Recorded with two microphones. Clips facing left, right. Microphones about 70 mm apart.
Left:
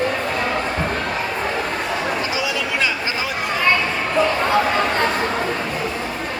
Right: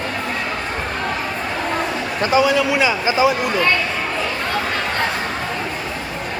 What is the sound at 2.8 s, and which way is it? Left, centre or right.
Speech, centre.